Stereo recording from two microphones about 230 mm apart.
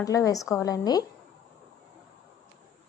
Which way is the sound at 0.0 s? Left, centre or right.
Centre.